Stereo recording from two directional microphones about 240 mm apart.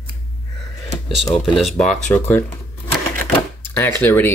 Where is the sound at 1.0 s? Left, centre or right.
Centre.